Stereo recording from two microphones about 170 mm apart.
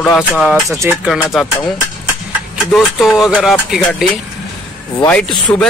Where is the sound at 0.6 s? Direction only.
15° right (ahead or behind).